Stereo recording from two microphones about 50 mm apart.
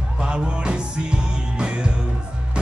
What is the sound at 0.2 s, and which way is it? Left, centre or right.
Music, centre.